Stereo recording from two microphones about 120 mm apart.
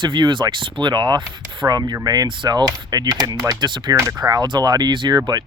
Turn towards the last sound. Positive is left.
turn(degrees=-35)  # may be behind; listen again after turning